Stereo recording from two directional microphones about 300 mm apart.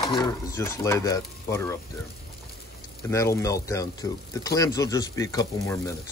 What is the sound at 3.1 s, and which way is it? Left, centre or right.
Speech, centre.